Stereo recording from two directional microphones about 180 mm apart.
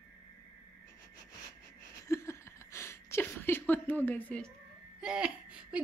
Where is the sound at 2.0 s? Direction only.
15° left (ahead or behind).